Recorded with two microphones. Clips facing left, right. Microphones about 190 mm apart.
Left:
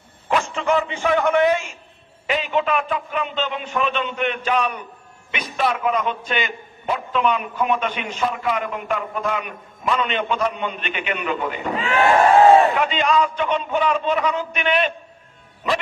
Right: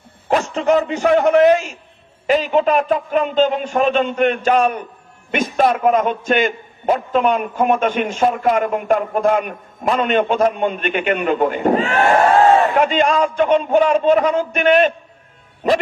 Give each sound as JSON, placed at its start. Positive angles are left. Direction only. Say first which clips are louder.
{"t": 0.3, "sound": "a man's voice", "louder": "right 5 dB", "side_deg": -40}